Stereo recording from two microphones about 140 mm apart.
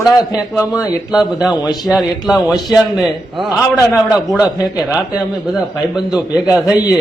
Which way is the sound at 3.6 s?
20° left (ahead or behind).